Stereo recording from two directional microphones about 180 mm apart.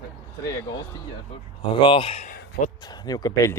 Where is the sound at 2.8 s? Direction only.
20° left (ahead or behind).